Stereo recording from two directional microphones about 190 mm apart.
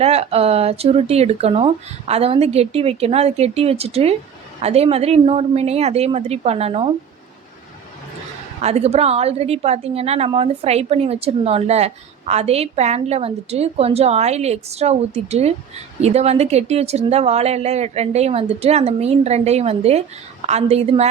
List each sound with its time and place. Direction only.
0.0 s a woman's voice: 35° right (ahead or behind)
8.6 s a woman's voice: 35° right (ahead or behind)